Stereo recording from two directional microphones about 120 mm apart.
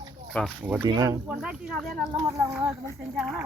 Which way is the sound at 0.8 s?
30° right (ahead or behind).